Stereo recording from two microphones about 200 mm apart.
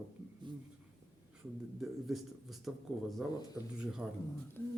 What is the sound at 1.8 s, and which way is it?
Speech, centre (ahead or behind).